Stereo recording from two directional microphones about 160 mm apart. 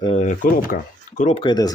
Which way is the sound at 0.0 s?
35° left (ahead or behind).